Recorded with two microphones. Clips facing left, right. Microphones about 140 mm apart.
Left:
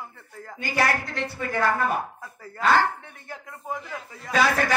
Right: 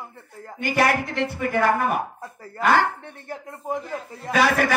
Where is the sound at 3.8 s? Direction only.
40° right (ahead or behind).